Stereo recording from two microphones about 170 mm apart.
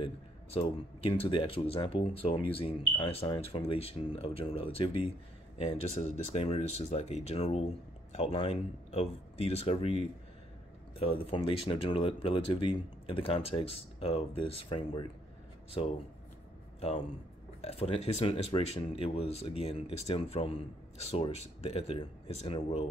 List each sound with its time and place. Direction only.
0.0 s speech: 35° left (ahead or behind)
17.6 s speech: 35° left (ahead or behind)